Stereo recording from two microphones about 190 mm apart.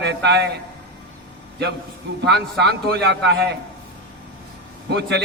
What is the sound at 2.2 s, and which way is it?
A man's voice, 60° right (ahead or behind).